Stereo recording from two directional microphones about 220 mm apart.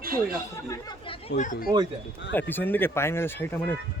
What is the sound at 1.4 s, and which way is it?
Speech, 35° left (ahead or behind).